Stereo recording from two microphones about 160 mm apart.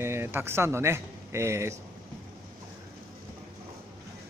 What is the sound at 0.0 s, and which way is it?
Speech, 15° right (ahead or behind).